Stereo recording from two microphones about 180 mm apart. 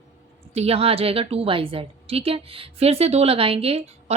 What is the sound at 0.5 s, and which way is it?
A woman's voice, 35° right (ahead or behind).